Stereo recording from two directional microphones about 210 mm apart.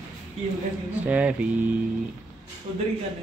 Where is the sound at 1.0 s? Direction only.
5° right (ahead or behind).